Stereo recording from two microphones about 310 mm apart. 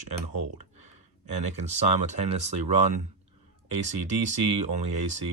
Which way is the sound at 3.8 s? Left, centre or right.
Right.